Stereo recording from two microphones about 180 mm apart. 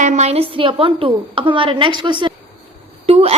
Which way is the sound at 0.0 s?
40° right (ahead or behind).